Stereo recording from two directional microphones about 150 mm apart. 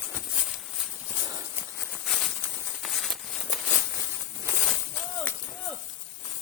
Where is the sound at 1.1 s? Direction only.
20° right (ahead or behind).